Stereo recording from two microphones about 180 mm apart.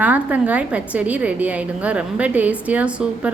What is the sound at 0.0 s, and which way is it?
A woman's voice, 10° right (ahead or behind).